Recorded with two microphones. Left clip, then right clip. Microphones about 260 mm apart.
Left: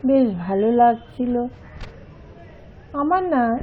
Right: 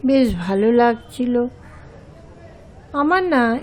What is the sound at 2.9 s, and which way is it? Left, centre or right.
Speech, right.